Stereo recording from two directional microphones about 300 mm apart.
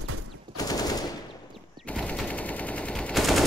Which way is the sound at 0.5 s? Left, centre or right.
Centre.